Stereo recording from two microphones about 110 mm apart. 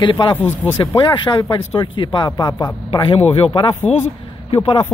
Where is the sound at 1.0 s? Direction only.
45° left (ahead or behind).